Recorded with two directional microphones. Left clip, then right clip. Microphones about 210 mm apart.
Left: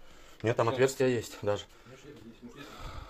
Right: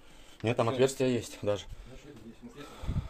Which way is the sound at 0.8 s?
5° right (ahead or behind).